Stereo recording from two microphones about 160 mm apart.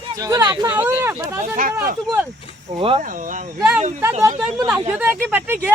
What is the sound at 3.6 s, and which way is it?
Speech, 10° right (ahead or behind).